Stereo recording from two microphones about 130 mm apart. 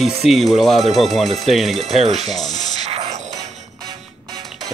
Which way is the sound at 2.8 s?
50° right (ahead or behind).